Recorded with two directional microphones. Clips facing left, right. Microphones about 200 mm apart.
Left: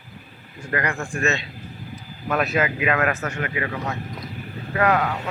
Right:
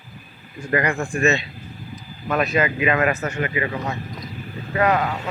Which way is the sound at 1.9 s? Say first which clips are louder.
Right 1 dB; 5° left (ahead or behind).